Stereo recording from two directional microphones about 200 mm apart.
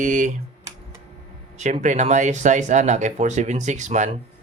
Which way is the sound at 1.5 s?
35° right (ahead or behind).